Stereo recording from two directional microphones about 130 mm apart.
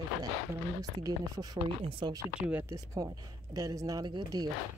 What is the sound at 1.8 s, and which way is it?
Speech, 45° right (ahead or behind).